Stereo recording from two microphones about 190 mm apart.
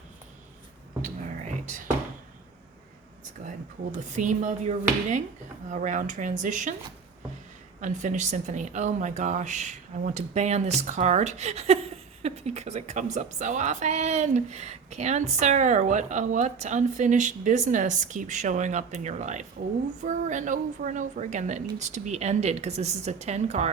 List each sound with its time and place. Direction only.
3.4 s a woman's voice: 40° right (ahead or behind)
7.8 s a woman's voice: 40° right (ahead or behind)